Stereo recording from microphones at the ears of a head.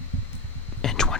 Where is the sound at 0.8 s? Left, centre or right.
Left.